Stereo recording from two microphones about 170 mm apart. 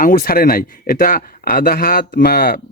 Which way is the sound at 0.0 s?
55° left (ahead or behind).